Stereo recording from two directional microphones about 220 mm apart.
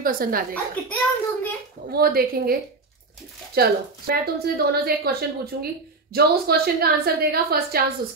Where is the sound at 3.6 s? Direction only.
45° right (ahead or behind).